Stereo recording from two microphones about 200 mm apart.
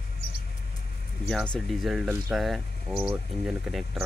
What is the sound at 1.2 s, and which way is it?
Speech, 5° left (ahead or behind).